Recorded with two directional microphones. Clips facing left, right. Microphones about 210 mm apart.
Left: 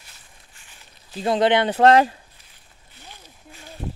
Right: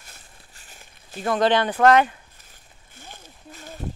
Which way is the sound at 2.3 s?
45° right (ahead or behind).